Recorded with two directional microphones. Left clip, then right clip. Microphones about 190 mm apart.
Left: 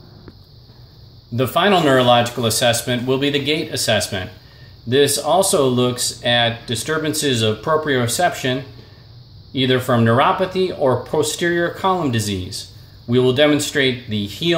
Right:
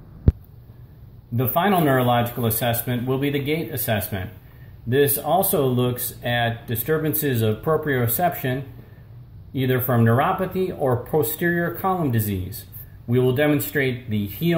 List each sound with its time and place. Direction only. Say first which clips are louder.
1.3 s speech: left 5 dB; 20° left (ahead or behind)